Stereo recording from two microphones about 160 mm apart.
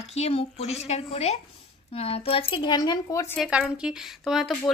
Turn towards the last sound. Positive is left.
turn(degrees=0)  # may be behind; listen again after turning